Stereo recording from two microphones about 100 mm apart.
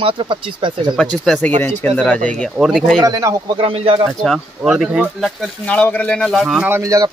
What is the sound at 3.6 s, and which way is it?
Speech, 70° right (ahead or behind).